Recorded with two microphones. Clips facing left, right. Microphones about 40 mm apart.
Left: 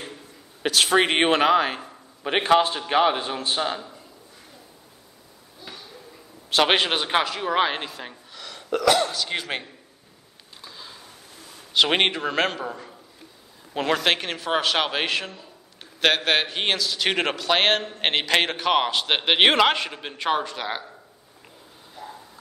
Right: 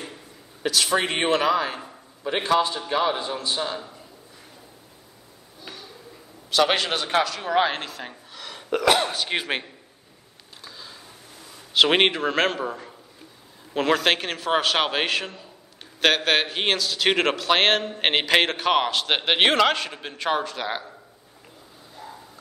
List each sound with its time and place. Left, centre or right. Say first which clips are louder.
0.6 s speech: left 3 dB; left
6.5 s speech: left 1 dB; left; by 8.1 s centre
8.1 s gasp: right 1 dB; centre
8.7 s speech: even; right
10.6 s a sound: even; centre
11.7 s speech: right 2 dB; centre